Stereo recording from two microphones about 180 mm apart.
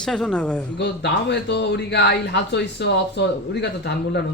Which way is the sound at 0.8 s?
70° left (ahead or behind).